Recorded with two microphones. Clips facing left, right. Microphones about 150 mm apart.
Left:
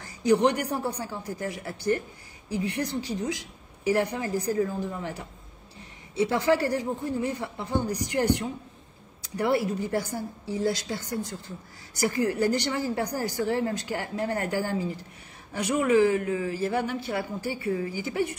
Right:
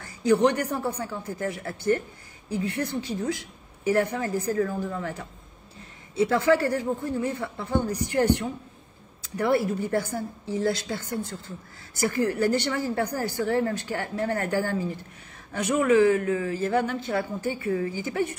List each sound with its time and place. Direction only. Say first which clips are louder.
0.0 s a woman's voice: right 1 dB; 15° left (ahead or behind)
6.2 s a woman's voice: right 2 dB; 20° left (ahead or behind)